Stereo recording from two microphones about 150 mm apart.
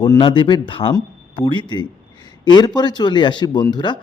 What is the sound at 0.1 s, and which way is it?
Speech, 30° left (ahead or behind).